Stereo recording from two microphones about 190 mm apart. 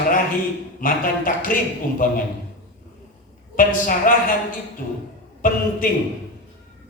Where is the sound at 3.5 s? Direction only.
45° left (ahead or behind).